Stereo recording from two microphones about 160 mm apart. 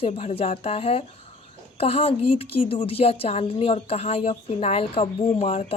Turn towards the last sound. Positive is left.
turn(degrees=40)  # may be behind; listen again after turning